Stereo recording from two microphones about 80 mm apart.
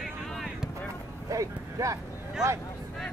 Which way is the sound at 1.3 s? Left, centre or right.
Right.